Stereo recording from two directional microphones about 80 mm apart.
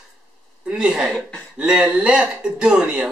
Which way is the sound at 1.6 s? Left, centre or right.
Centre.